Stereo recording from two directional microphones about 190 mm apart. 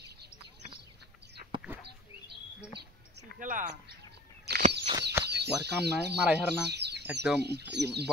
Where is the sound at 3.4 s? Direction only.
45° right (ahead or behind).